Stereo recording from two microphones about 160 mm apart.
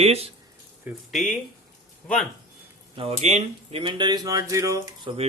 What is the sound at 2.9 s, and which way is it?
Speech, 40° right (ahead or behind).